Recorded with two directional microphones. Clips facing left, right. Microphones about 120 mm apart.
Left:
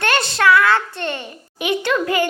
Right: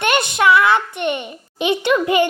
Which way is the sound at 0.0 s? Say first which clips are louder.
Right 1 dB; 20° right (ahead or behind).